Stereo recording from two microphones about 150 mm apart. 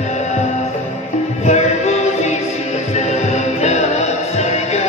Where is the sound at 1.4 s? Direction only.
50° left (ahead or behind).